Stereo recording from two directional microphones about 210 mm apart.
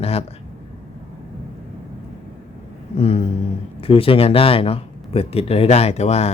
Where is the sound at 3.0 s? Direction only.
30° left (ahead or behind).